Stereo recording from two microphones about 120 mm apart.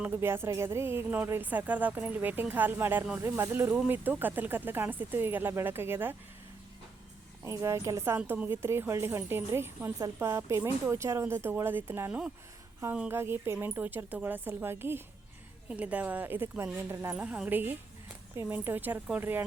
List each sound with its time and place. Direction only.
0.0 s a woman's voice: 20° right (ahead or behind)
7.4 s a woman's voice: 25° right (ahead or behind)